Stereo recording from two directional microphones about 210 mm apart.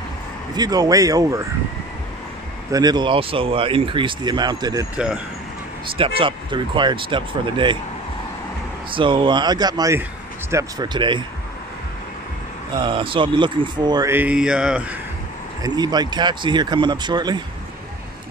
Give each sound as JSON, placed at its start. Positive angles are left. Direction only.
{"t": 0.6, "sound": "speech", "side_deg": -20}
{"t": 2.7, "sound": "speech", "side_deg": -20}
{"t": 4.9, "sound": "speech", "side_deg": -5}
{"t": 5.9, "sound": "speech", "side_deg": -25}
{"t": 8.9, "sound": "speech", "side_deg": -25}
{"t": 12.7, "sound": "speech", "side_deg": -25}
{"t": 15.6, "sound": "speech", "side_deg": -20}